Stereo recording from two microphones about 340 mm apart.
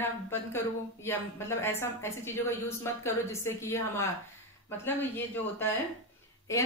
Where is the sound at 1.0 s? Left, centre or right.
Centre.